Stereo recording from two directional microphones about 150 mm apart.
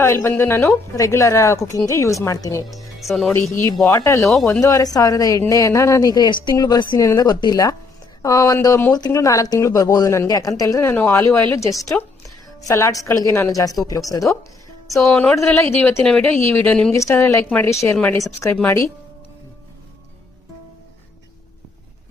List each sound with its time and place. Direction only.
0.0 s speech: 15° left (ahead or behind)
3.0 s speech: centre (ahead or behind)
3.8 s speech: 20° left (ahead or behind)
15.1 s speech: 10° left (ahead or behind)
16.9 s speech: 20° left (ahead or behind)
18.5 s speech: 15° left (ahead or behind)